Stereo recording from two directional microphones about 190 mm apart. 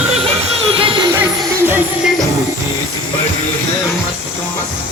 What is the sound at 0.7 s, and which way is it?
Music, 30° right (ahead or behind).